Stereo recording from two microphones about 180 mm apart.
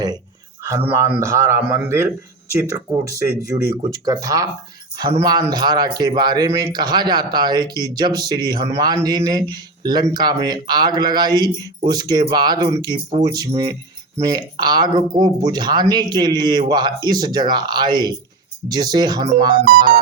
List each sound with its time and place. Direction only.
0.9 s speech: 15° right (ahead or behind)
19.6 s music: 50° right (ahead or behind)